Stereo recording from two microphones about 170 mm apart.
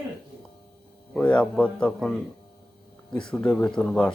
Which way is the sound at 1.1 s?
5° left (ahead or behind).